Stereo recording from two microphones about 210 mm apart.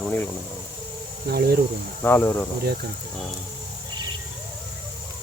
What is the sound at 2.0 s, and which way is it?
Speech, 10° left (ahead or behind).